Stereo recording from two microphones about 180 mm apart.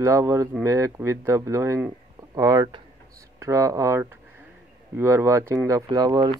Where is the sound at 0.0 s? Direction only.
15° right (ahead or behind).